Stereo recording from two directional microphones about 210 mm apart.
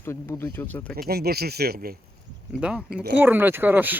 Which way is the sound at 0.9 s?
45° right (ahead or behind).